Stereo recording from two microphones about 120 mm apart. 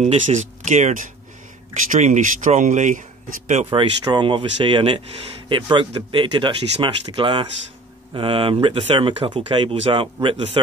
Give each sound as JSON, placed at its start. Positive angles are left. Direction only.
{"t": 0.0, "sound": "speech", "side_deg": -75}
{"t": 3.7, "sound": "speech", "side_deg": -45}